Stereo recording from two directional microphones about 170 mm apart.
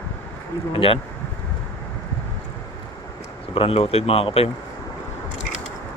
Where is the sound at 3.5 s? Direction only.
35° left (ahead or behind).